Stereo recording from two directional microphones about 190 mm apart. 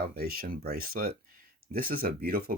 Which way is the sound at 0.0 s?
55° right (ahead or behind).